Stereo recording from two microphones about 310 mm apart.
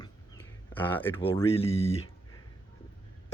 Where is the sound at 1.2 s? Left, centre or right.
Centre.